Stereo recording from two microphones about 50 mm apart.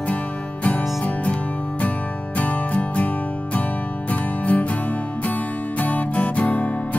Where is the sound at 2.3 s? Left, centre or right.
Left.